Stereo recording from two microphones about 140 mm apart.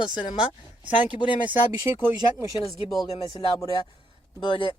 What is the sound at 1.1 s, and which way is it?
Speech, 35° left (ahead or behind).